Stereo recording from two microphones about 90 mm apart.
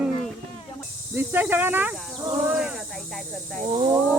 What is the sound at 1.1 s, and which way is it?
Speech, 25° right (ahead or behind).